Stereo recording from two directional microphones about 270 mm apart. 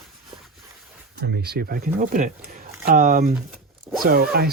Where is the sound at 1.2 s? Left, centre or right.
Right.